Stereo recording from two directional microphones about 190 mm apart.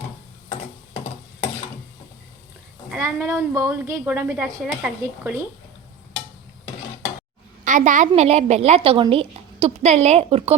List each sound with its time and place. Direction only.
2.9 s a woman's voice: 10° right (ahead or behind)
7.6 s a woman's voice: 40° right (ahead or behind)